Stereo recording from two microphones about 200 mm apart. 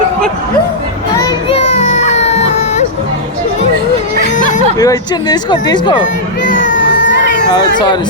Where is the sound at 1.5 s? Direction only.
35° left (ahead or behind).